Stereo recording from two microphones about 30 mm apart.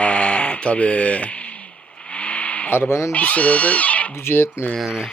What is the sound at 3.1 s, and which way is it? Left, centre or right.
Speech, left.